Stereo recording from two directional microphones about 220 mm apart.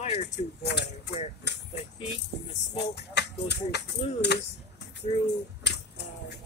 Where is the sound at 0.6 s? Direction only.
50° left (ahead or behind).